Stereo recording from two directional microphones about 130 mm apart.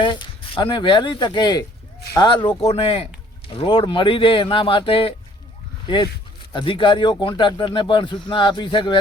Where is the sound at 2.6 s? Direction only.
50° left (ahead or behind).